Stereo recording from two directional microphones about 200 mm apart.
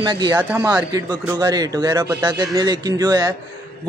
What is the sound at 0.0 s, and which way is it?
A man's voice, 20° right (ahead or behind).